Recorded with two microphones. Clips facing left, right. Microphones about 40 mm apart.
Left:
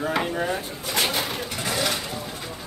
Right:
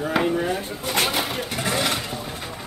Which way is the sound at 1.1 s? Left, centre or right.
Right.